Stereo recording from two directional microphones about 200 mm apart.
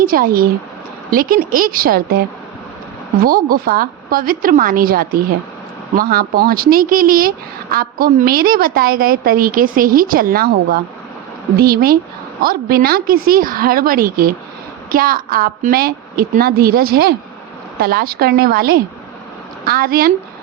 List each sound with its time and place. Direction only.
0.0 s speech: 45° right (ahead or behind)
3.2 s speech: 45° right (ahead or behind)